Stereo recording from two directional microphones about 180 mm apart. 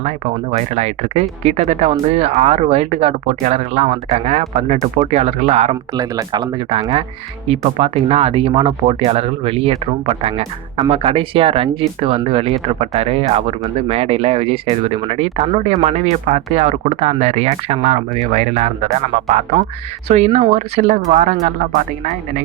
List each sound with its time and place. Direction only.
0.5 s speech: 35° right (ahead or behind)
5.9 s speech: 20° right (ahead or behind); by 21.5 s 40° right (ahead or behind)